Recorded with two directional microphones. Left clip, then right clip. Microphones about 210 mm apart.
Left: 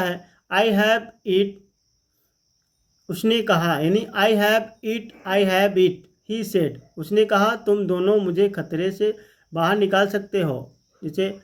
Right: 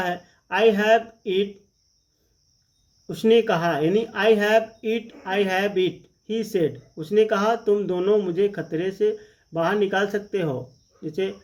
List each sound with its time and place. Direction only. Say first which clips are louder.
0.0 s speech: left 1 dB; 35° left (ahead or behind)
3.2 s speech: right 2 dB; 35° left (ahead or behind)